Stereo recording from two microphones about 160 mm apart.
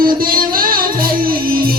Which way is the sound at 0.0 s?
65° right (ahead or behind).